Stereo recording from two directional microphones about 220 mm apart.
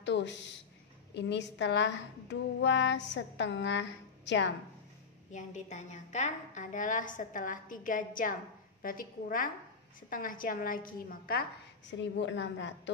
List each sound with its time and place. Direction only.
0.0 s a woman's voice: 55° left (ahead or behind)
5.3 s a woman's voice: 35° left (ahead or behind)
12.0 s a woman's voice: 55° left (ahead or behind)